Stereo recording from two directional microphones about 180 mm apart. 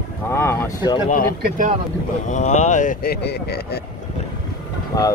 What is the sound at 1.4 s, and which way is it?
Speech, 50° right (ahead or behind).